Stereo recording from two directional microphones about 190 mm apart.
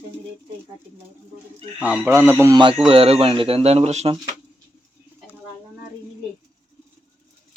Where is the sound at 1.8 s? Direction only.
10° right (ahead or behind).